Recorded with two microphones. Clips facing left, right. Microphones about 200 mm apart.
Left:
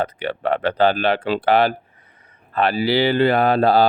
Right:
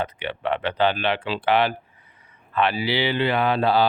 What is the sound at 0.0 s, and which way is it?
Speech, 40° left (ahead or behind).